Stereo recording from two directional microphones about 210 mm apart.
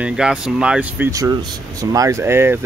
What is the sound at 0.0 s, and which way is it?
Speech, 5° right (ahead or behind).